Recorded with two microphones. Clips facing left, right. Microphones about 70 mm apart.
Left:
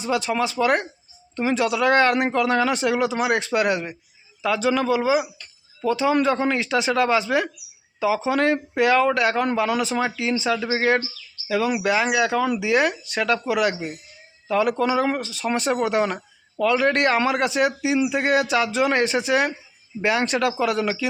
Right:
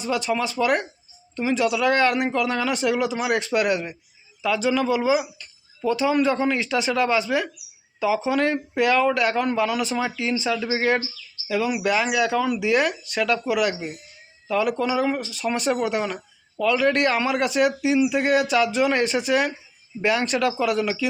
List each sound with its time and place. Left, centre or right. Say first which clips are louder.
0.0 s speech: left 1 dB; left
4.9 s speech: left 1 dB; left
5.4 s a sound: even; left
6.0 s speech: left 1 dB; left
7.9 s speech: even; left
8.3 s speech: left 2 dB; left
16.0 s speech: left 4 dB; left